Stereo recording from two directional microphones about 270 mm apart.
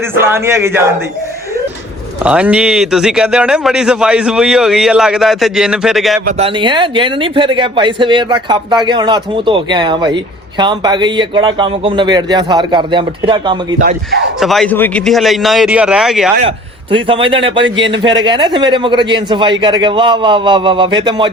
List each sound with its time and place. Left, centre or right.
0.2 s a man's voice: centre
2.2 s a man's voice: centre
6.2 s a man's voice: centre
14.3 s a man's voice: centre
16.4 s a man's voice: centre